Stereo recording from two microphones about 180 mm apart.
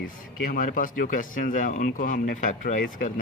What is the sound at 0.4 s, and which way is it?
Speech, 50° left (ahead or behind).